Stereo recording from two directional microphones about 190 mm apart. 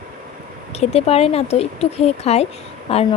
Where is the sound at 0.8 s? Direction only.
35° left (ahead or behind).